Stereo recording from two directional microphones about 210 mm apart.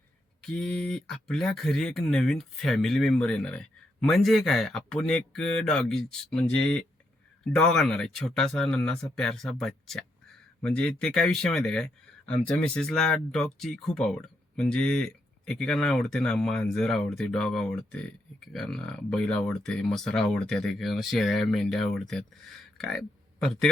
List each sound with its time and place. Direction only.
0.4 s speech: 5° left (ahead or behind)